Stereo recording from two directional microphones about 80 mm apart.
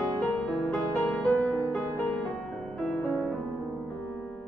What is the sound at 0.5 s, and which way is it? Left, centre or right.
Music, centre.